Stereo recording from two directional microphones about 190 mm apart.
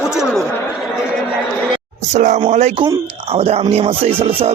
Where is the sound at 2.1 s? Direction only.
40° right (ahead or behind).